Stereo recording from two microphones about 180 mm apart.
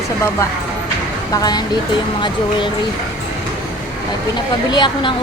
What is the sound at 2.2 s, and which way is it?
Speech, 25° left (ahead or behind).